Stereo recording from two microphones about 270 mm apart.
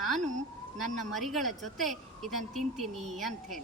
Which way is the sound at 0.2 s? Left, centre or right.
Right.